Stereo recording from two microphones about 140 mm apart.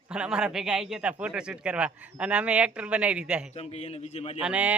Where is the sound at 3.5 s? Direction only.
50° left (ahead or behind).